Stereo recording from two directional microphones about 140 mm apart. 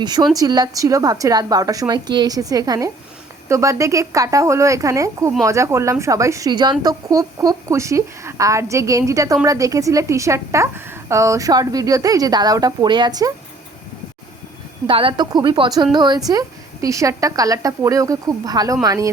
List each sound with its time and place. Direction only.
0.0 s a woman's voice: 30° right (ahead or behind)
14.8 s a woman's voice: 40° right (ahead or behind); by 19.1 s 25° right (ahead or behind)